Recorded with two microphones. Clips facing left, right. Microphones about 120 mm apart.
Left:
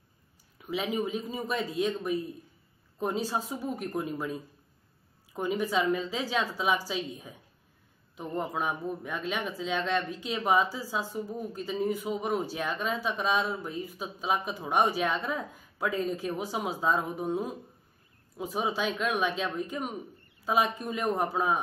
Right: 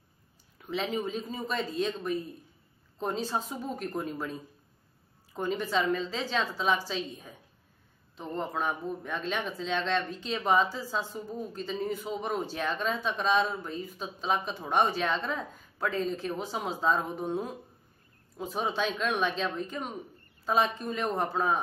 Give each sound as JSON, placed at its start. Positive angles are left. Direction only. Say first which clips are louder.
{"t": 0.6, "sound": "a man's voice", "louder": "left 1 dB", "side_deg": 10}